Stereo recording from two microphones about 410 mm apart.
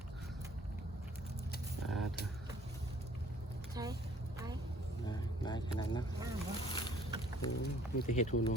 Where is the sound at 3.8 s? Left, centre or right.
Centre.